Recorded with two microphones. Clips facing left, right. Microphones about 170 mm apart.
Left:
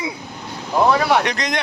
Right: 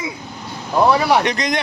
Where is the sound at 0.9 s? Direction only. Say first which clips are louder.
Right 1 dB; 5° right (ahead or behind).